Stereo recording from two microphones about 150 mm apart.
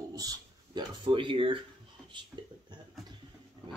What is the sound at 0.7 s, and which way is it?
Speech, 35° right (ahead or behind).